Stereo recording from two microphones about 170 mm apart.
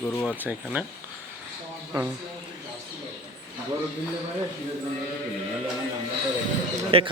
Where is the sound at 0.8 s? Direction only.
10° right (ahead or behind).